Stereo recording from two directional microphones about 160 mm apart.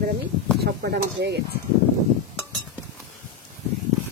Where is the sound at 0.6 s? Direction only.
90° right.